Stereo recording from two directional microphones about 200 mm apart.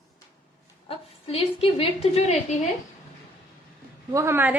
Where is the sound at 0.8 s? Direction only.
30° left (ahead or behind).